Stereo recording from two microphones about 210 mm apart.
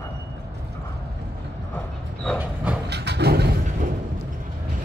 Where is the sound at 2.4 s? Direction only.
5° right (ahead or behind).